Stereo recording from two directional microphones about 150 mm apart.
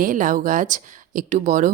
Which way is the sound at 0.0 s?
60° right (ahead or behind).